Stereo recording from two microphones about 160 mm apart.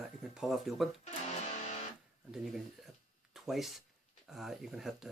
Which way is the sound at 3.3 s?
Centre (ahead or behind).